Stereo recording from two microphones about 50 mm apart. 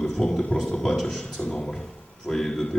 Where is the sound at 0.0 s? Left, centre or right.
Centre.